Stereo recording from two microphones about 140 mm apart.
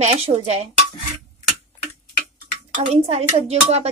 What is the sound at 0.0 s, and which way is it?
Speech, 50° right (ahead or behind).